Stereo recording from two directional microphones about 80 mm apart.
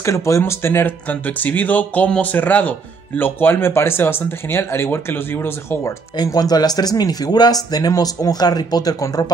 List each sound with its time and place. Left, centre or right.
0.0 s speech: left
6.2 s speech: left